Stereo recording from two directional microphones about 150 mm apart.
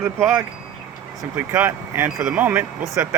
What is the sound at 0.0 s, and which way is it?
Speech, 15° right (ahead or behind).